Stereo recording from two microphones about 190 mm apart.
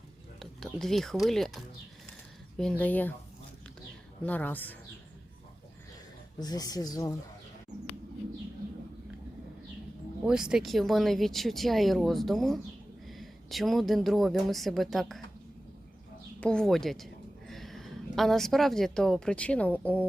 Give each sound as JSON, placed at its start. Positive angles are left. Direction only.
{"t": 0.3, "sound": "speech", "side_deg": 0}
{"t": 4.2, "sound": "speech", "side_deg": 10}
{"t": 6.4, "sound": "speech", "side_deg": 20}
{"t": 10.2, "sound": "speech", "side_deg": -5}
{"t": 16.4, "sound": "a woman's voice", "side_deg": 5}